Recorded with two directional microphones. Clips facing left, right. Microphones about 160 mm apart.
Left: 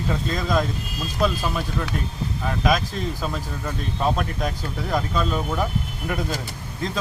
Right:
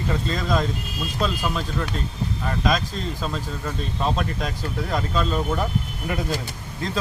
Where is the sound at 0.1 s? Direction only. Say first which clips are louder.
Even; centre (ahead or behind).